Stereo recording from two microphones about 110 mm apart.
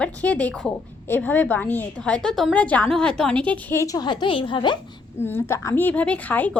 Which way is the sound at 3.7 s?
30° left (ahead or behind).